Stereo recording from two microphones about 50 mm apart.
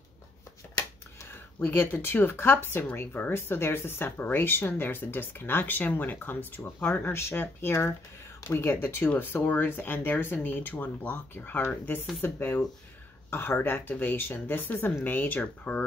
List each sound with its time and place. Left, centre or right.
1.3 s speech: left
3.0 s speech: left
3.3 s speech: left
15.4 s speech: left